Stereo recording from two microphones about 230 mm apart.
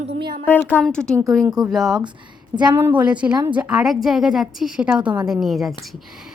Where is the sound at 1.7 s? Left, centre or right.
Centre.